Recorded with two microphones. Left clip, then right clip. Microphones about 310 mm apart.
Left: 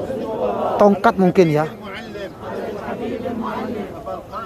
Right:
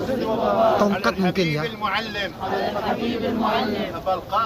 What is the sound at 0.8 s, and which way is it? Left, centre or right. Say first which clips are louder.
Speech: left 7 dB; centre.